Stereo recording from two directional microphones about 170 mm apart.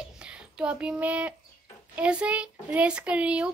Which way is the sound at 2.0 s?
5° right (ahead or behind).